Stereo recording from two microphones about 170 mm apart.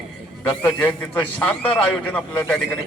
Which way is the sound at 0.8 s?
10° left (ahead or behind).